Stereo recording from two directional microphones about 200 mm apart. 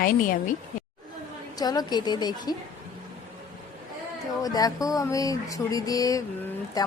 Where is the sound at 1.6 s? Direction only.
20° left (ahead or behind).